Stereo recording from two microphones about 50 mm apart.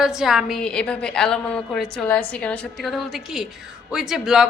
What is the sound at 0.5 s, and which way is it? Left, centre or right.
A woman's voice, centre.